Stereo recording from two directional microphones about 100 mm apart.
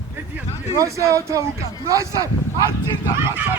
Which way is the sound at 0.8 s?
30° right (ahead or behind).